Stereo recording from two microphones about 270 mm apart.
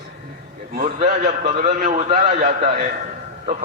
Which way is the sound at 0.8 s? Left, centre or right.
Right.